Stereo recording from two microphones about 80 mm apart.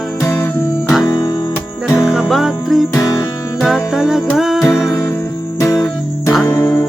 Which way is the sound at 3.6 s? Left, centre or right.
Centre.